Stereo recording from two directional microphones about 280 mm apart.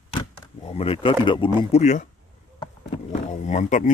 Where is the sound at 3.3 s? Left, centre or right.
Left.